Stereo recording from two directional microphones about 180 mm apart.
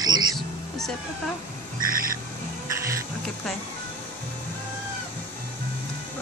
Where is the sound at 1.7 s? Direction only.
50° right (ahead or behind).